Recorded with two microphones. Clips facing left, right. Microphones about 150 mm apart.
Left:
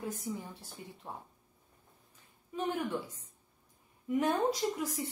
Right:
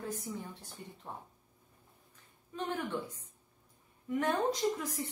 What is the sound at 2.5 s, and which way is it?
Speech, 10° left (ahead or behind).